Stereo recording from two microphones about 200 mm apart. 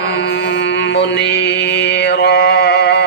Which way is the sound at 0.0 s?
60° left (ahead or behind).